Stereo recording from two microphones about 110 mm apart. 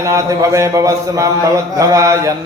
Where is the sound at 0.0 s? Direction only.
30° right (ahead or behind).